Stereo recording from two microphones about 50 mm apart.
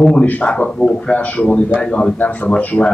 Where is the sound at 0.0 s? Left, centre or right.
Centre.